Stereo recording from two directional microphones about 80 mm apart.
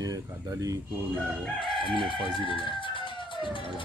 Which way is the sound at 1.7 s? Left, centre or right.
Left.